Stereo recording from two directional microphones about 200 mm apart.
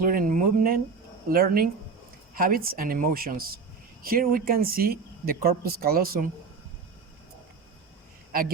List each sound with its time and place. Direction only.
0.0 s speech: 45° right (ahead or behind)
8.3 s a man's voice: 45° right (ahead or behind)